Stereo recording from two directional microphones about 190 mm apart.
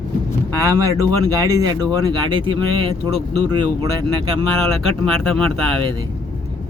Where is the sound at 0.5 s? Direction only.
15° right (ahead or behind).